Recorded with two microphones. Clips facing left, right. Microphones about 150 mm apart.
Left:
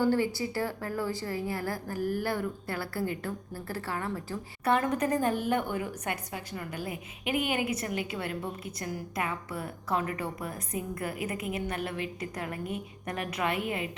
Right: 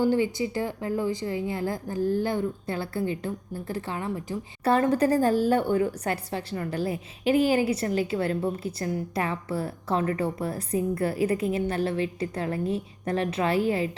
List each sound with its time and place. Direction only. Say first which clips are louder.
0.0 s a woman's voice: right 3 dB; 15° right (ahead or behind)
4.6 s a woman's voice: right 5 dB; 30° right (ahead or behind)